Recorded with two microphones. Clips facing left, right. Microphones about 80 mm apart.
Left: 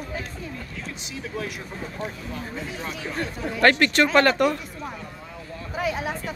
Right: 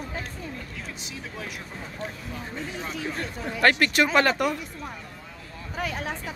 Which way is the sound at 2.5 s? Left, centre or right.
Centre.